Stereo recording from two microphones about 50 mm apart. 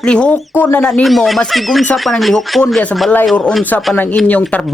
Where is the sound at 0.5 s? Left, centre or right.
Left.